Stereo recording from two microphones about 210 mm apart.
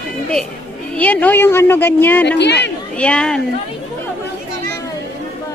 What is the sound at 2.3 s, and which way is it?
Speech, 55° left (ahead or behind).